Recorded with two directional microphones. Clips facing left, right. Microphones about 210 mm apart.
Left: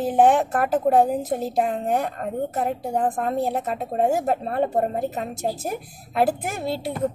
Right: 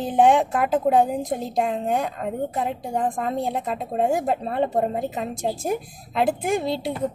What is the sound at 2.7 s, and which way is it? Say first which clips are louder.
Speech: left 2 dB; 5° left (ahead or behind).